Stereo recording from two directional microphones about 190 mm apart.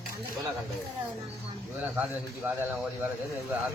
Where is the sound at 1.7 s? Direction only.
10° right (ahead or behind).